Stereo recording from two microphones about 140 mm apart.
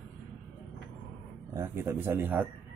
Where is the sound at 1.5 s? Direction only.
20° right (ahead or behind).